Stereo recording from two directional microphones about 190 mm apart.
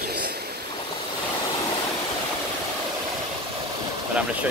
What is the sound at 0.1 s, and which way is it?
Vehicle, 55° right (ahead or behind).